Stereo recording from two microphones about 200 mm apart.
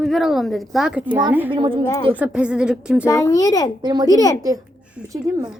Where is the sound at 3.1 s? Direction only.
15° left (ahead or behind).